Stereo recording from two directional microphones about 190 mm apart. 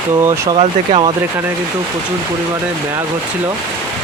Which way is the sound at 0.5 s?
30° right (ahead or behind).